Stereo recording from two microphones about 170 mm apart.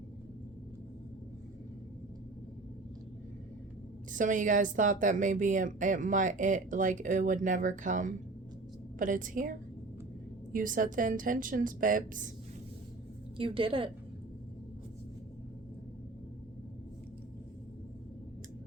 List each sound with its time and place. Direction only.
4.1 s speech: 50° right (ahead or behind)
13.3 s a woman's voice: 30° right (ahead or behind)